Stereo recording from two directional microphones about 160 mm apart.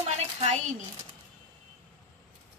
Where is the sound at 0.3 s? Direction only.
40° right (ahead or behind).